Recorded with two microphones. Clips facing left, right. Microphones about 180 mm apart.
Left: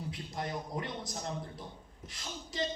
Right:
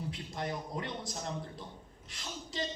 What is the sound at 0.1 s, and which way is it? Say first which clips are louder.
Speech: right 1 dB; 20° right (ahead or behind).